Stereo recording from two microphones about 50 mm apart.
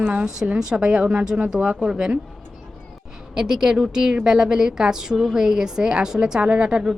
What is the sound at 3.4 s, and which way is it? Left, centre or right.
A woman's voice, centre.